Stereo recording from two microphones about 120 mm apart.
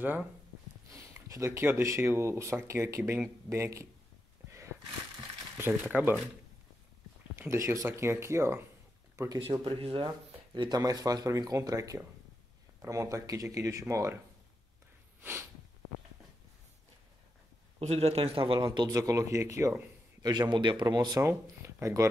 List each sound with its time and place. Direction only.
0.0 s speech: 15° right (ahead or behind)
0.9 s speech: 25° right (ahead or behind)
4.5 s a sound: 25° right (ahead or behind)
5.6 s speech: 10° right (ahead or behind)
7.3 s speech: 25° right (ahead or behind)
9.4 s speech: 45° right (ahead or behind); by 14.1 s 25° right (ahead or behind)
17.7 s speech: 55° right (ahead or behind)
18.6 s speech: 30° right (ahead or behind)